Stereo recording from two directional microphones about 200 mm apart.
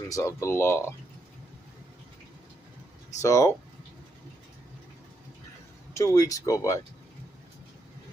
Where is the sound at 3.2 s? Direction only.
15° left (ahead or behind).